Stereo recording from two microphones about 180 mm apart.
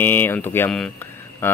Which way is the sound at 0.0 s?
10° left (ahead or behind).